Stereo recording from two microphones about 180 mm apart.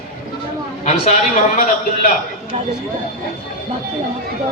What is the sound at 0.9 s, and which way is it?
Speech, 40° left (ahead or behind).